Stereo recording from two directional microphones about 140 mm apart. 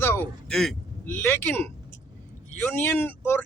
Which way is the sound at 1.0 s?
15° left (ahead or behind).